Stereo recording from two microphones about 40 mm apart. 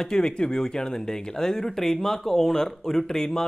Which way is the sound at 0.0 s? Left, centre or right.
Centre.